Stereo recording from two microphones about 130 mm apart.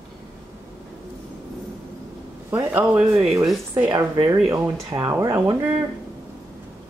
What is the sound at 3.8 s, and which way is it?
Speech, 35° right (ahead or behind).